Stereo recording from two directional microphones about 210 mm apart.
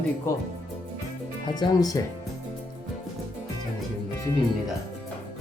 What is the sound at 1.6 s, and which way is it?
Speech, 20° left (ahead or behind).